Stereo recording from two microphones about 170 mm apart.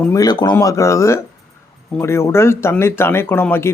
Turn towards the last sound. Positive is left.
turn(degrees=15)  # may be behind; listen again after turning